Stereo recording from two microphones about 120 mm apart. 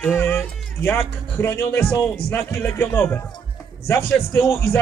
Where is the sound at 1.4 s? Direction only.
20° left (ahead or behind).